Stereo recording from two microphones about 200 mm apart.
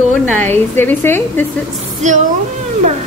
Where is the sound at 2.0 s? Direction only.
35° right (ahead or behind).